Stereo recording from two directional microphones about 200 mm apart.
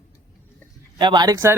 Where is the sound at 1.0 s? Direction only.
20° right (ahead or behind).